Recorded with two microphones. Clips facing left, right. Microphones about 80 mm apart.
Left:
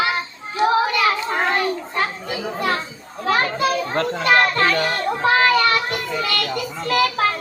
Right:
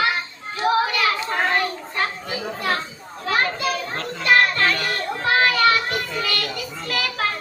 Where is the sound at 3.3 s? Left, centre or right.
Left.